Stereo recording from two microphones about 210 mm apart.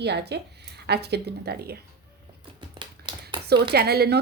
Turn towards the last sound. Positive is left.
turn(degrees=-50)  # may be behind; listen again after turning